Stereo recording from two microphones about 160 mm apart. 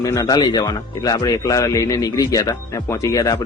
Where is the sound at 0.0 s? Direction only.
20° left (ahead or behind).